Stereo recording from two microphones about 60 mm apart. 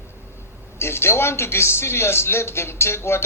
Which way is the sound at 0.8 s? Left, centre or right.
Left.